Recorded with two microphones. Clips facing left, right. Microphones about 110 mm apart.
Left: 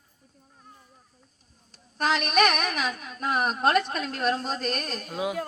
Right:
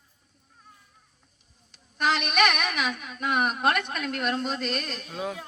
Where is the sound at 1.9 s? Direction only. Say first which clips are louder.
Left 1 dB; 40° left (ahead or behind).